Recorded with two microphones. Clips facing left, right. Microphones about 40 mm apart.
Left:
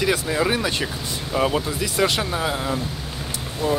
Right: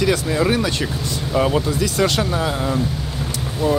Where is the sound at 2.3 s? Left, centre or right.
Centre.